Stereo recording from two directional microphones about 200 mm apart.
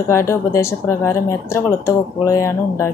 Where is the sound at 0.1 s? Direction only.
15° left (ahead or behind).